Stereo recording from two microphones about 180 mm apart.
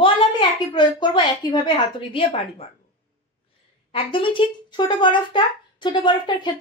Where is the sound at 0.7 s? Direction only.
25° left (ahead or behind).